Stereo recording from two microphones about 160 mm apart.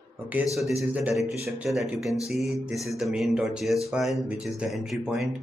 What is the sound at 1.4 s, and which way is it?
Speech, 15° right (ahead or behind).